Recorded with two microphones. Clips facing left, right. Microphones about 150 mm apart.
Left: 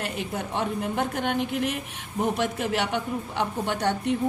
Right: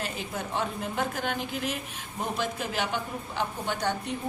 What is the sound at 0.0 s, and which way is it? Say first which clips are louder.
A woman's voice: left 3 dB; 65° left (ahead or behind).